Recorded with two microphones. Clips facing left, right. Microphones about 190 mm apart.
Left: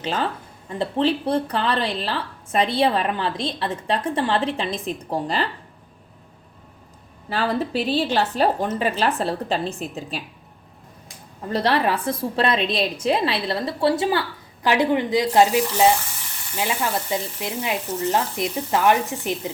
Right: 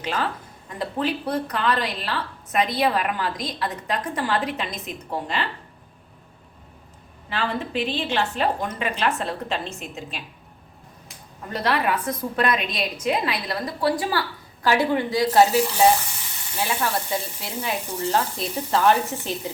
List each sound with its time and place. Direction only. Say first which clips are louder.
0.0 s a woman's voice: left 2 dB; 30° left (ahead or behind)
7.3 s a woman's voice: left 4 dB; 40° left (ahead or behind)
11.5 s a woman's voice: left 3 dB; 30° left (ahead or behind)
16.6 s sizzle: left 1 dB; 15° left (ahead or behind)